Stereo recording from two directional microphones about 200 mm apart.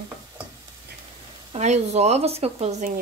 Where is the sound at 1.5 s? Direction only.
35° right (ahead or behind).